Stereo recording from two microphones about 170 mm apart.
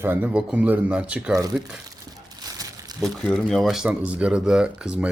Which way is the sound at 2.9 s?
Centre (ahead or behind).